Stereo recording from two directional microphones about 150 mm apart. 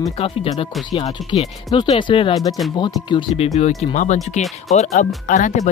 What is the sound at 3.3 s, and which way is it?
Speech, 45° left (ahead or behind).